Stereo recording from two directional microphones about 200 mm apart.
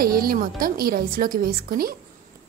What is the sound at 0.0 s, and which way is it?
Speech, 45° right (ahead or behind).